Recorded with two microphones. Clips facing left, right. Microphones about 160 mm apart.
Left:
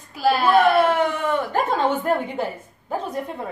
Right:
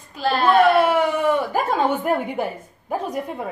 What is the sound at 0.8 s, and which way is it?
A woman's voice, 10° right (ahead or behind).